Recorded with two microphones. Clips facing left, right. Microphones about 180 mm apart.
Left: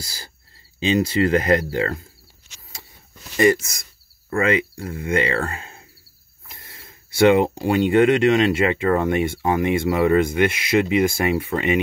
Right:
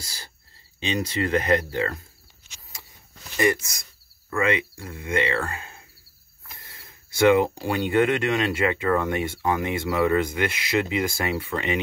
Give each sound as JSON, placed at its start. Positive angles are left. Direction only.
{"t": 0.7, "sound": "speech", "side_deg": 35}
{"t": 4.3, "sound": "speech", "side_deg": 35}